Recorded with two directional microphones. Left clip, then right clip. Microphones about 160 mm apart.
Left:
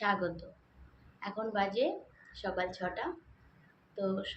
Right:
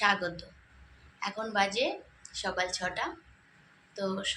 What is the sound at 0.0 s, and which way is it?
A woman's voice, 20° left (ahead or behind).